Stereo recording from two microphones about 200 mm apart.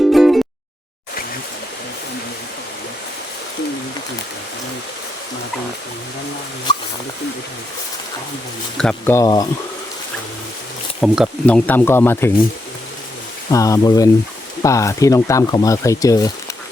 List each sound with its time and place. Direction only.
0.1 s a sound: centre (ahead or behind)
8.8 s speech: 5° left (ahead or behind)
11.0 s speech: 5° right (ahead or behind)
11.4 s speech: 5° left (ahead or behind)
13.5 s speech: 15° left (ahead or behind)